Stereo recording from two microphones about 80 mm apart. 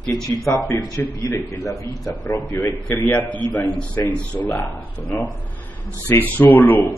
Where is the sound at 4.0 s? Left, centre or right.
Left.